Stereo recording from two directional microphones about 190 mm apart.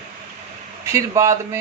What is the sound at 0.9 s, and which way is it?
Speech, 15° right (ahead or behind).